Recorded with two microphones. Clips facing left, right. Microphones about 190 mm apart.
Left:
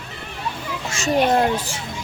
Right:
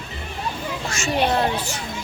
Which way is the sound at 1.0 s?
45° left (ahead or behind).